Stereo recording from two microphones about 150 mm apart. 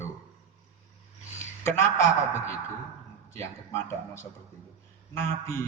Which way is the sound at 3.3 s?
15° left (ahead or behind).